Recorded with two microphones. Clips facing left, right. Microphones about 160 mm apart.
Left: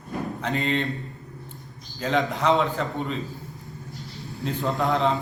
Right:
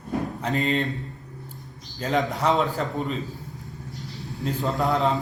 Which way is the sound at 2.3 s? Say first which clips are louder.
Even; 40° right (ahead or behind).